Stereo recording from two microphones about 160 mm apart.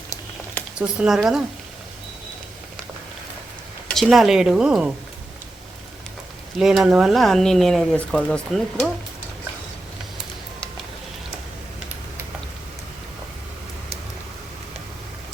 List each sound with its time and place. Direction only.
0.8 s speech: 5° right (ahead or behind)
3.8 s speech: centre (ahead or behind)
6.6 s speech: 5° right (ahead or behind)